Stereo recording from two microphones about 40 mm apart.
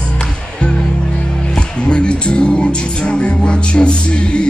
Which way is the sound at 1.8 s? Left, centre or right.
Left.